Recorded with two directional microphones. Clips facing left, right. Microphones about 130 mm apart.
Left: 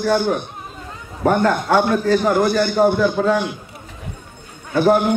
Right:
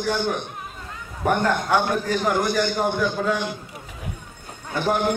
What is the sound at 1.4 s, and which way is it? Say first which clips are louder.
A man's voice: left 5 dB; 40° left (ahead or behind).